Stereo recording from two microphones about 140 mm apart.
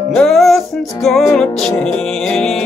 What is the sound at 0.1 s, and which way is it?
Music, centre (ahead or behind).